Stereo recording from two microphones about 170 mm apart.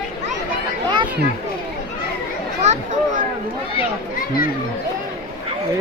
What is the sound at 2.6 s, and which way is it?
Speech, 45° right (ahead or behind).